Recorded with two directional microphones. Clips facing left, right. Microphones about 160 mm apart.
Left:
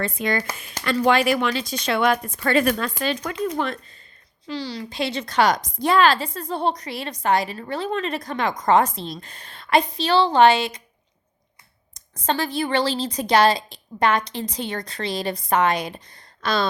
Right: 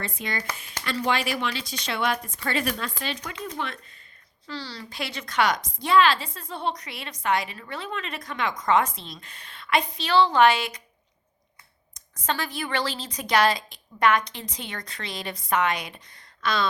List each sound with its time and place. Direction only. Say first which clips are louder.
0.0 s speech: left 8 dB; 50° left (ahead or behind)
4.4 s a woman's voice: left 7 dB; 15° left (ahead or behind)
12.2 s a woman's voice: left 6 dB; 30° left (ahead or behind)